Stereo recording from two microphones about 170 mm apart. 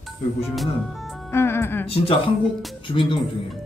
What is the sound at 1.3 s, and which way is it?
Speech, 15° left (ahead or behind).